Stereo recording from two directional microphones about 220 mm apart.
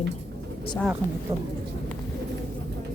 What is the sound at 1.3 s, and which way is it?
Speech, 25° right (ahead or behind).